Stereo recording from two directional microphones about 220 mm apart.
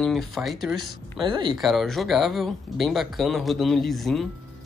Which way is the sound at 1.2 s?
20° right (ahead or behind).